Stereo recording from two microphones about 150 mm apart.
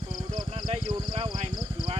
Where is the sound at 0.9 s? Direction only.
30° right (ahead or behind).